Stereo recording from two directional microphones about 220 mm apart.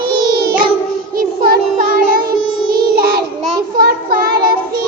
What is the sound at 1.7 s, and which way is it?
Child singing, 40° right (ahead or behind).